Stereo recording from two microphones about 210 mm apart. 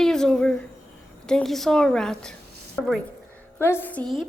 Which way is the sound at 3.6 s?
10° left (ahead or behind).